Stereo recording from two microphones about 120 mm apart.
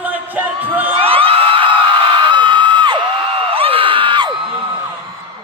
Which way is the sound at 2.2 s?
40° right (ahead or behind).